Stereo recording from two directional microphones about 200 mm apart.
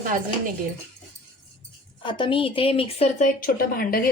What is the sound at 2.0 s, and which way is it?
A woman's voice, 25° left (ahead or behind).